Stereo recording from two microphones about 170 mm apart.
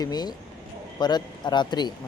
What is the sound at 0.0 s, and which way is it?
Speech, 25° left (ahead or behind).